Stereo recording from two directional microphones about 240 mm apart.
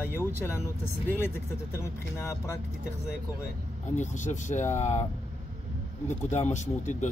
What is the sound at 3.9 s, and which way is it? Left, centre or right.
Speech, left.